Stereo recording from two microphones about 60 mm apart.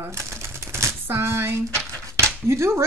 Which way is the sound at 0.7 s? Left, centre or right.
Right.